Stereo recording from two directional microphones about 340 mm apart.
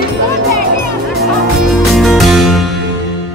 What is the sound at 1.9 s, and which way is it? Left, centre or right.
Music, centre.